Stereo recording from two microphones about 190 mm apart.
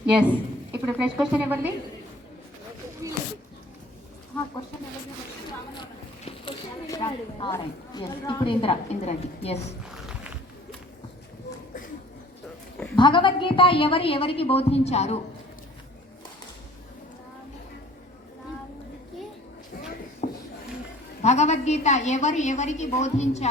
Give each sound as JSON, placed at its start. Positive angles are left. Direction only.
{"t": 0.2, "sound": "a woman's voice", "side_deg": -5}
{"t": 3.0, "sound": "a sound", "side_deg": -15}
{"t": 6.8, "sound": "a woman's voice", "side_deg": 20}
{"t": 9.8, "sound": "music", "side_deg": -5}
{"t": 13.0, "sound": "a woman's voice", "side_deg": 25}
{"t": 20.2, "sound": "a sound", "side_deg": 40}
{"t": 21.2, "sound": "a woman's voice", "side_deg": 35}